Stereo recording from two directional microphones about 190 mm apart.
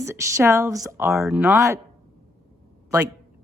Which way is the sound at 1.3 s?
5° right (ahead or behind).